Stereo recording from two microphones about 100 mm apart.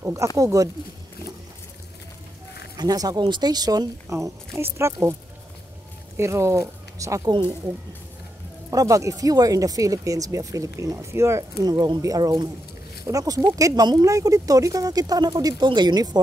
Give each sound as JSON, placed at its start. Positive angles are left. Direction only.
{"t": 0.0, "sound": "speech", "side_deg": -30}
{"t": 2.8, "sound": "speech", "side_deg": -40}
{"t": 6.1, "sound": "speech", "side_deg": -30}
{"t": 7.2, "sound": "speech", "side_deg": -50}
{"t": 8.6, "sound": "speech", "side_deg": -35}
{"t": 11.6, "sound": "speech", "side_deg": -40}